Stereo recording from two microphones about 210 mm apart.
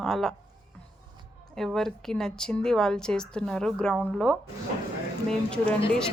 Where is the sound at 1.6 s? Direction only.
Centre (ahead or behind).